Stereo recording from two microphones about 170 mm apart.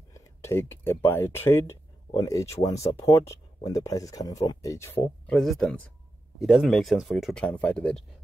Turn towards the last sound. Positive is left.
turn(degrees=5)  # may be behind; listen again after turning